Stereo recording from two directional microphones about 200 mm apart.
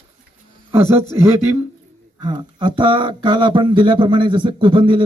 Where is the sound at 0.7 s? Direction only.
10° right (ahead or behind).